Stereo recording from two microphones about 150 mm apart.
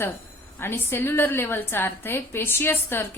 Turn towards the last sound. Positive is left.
turn(degrees=15)  # may be behind; listen again after turning